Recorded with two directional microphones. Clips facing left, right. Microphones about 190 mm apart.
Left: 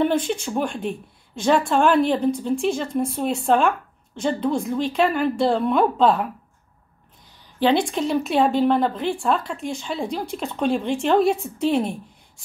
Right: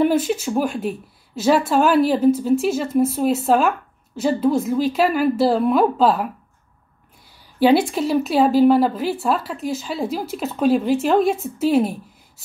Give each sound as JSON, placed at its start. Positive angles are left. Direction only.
{"t": 0.0, "sound": "speech", "side_deg": -5}
{"t": 7.5, "sound": "speech", "side_deg": -10}